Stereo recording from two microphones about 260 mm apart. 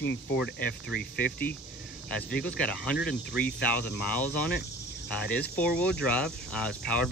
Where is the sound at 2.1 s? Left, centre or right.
Centre.